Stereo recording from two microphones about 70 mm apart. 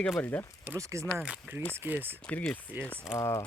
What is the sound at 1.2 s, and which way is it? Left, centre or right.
Speech, centre.